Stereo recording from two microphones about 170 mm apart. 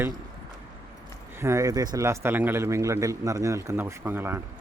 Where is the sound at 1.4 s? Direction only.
15° right (ahead or behind).